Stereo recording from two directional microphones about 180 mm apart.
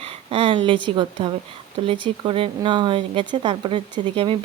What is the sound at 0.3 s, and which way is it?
Speech, 30° right (ahead or behind).